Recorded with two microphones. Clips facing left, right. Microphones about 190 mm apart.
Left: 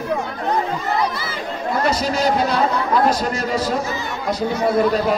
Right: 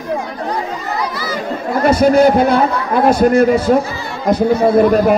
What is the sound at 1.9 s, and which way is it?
A man's voice, 55° right (ahead or behind).